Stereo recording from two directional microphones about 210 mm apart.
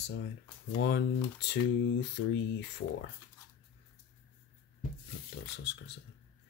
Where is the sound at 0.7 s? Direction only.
55° left (ahead or behind).